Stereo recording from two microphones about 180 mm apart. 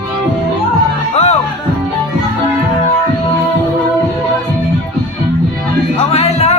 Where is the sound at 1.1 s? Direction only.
35° left (ahead or behind).